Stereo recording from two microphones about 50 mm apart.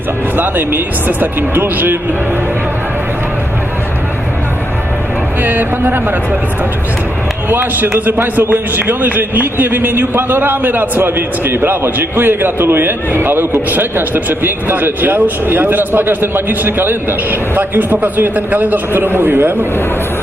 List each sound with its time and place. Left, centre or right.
0.3 s a man's voice: right
5.4 s a man's voice: right
7.5 s a man's voice: right